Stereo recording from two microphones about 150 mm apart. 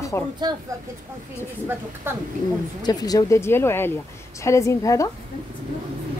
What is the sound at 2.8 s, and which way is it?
Speech, 25° left (ahead or behind).